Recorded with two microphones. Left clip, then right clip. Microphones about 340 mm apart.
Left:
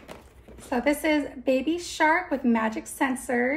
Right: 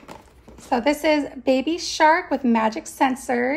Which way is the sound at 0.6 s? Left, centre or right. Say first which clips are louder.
Right 5 dB; right.